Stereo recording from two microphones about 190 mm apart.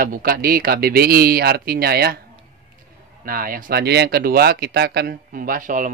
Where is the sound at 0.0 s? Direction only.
50° right (ahead or behind).